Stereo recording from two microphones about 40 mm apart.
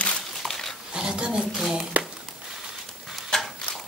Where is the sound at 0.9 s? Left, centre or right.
Centre.